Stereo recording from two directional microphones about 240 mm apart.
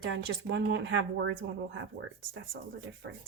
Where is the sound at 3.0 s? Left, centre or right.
Right.